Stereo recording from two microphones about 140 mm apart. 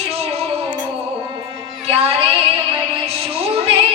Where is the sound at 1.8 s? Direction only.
45° right (ahead or behind).